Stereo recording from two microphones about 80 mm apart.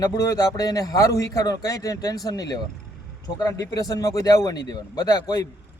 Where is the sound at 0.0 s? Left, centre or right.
Left.